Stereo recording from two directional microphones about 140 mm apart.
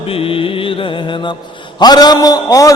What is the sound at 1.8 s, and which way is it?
Speech, 30° left (ahead or behind).